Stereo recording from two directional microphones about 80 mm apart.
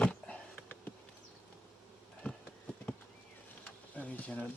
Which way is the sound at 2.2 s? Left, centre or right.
Centre.